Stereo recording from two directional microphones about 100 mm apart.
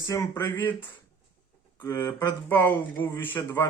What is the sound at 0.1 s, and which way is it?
Speech, 40° left (ahead or behind).